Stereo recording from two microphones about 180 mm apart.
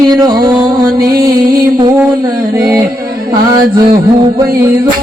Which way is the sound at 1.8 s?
20° right (ahead or behind).